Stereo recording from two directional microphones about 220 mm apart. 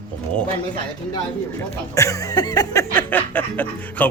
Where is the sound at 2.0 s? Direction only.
15° left (ahead or behind).